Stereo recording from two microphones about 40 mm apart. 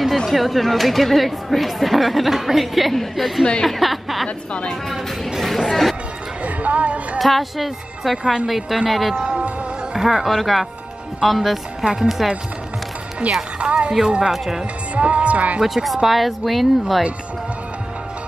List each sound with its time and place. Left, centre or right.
0.3 s speech: centre
5.7 s speech: centre
6.4 s speech: right
7.2 s a woman's voice: centre
11.8 s speech: centre
13.2 s music: right
13.6 s speech: right
14.3 s speech: centre
15.0 s music: right
15.6 s speech: centre